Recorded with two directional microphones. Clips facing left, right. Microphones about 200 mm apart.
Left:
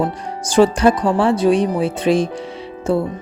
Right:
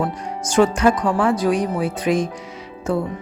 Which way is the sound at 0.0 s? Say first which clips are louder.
Left 2 dB; 30° left (ahead or behind).